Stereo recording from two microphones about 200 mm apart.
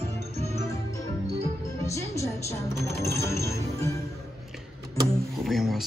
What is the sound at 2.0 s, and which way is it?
Music, 15° left (ahead or behind).